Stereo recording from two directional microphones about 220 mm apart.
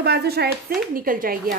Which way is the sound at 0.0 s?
50° right (ahead or behind).